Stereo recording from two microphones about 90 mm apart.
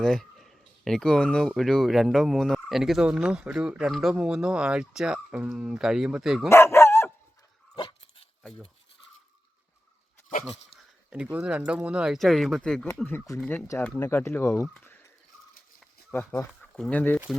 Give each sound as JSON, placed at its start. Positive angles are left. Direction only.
{"t": 0.0, "sound": "speech", "side_deg": 5}
{"t": 6.5, "sound": "dog", "side_deg": 30}
{"t": 7.8, "sound": "dog", "side_deg": 65}
{"t": 11.1, "sound": "speech", "side_deg": -15}
{"t": 12.1, "sound": "speech", "side_deg": 0}
{"t": 13.3, "sound": "speech", "side_deg": 35}
{"t": 13.7, "sound": "speech", "side_deg": 20}
{"t": 16.6, "sound": "speech", "side_deg": 5}